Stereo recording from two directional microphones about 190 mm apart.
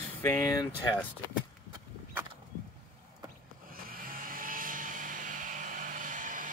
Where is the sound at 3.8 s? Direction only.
50° right (ahead or behind).